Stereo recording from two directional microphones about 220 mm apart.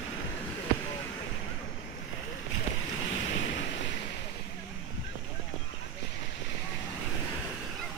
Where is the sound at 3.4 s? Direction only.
55° left (ahead or behind).